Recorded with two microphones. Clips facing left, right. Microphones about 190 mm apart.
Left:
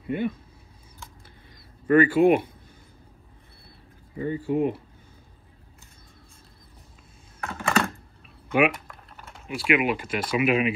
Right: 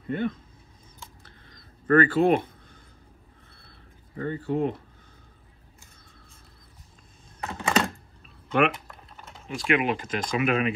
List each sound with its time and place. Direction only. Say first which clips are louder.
0.0 s speech: left 1 dB; 10° left (ahead or behind)
1.9 s speech: left 2 dB; 10° left (ahead or behind)
4.2 s speech: left 2 dB; 10° left (ahead or behind)
7.3 s computer keyboard: even; 20° right (ahead or behind)
8.5 s speech: left 1 dB; 10° left (ahead or behind)